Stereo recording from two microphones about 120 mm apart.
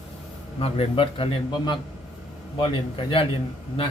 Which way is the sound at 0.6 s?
50° left (ahead or behind).